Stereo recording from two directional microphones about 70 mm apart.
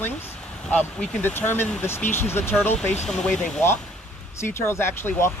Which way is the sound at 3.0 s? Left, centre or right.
Centre.